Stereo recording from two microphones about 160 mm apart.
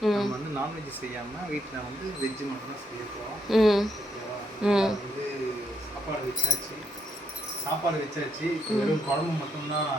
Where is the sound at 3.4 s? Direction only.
Centre (ahead or behind).